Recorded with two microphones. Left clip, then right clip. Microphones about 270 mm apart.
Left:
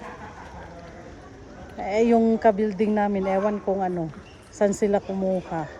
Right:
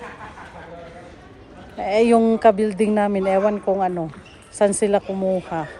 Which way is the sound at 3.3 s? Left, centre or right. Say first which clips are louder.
Right 5 dB; right.